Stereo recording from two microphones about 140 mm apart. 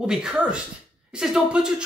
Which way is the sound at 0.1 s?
5° right (ahead or behind).